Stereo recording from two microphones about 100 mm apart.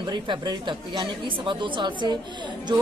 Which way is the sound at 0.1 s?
50° right (ahead or behind).